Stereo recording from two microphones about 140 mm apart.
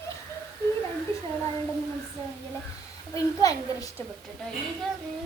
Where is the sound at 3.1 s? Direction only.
25° left (ahead or behind).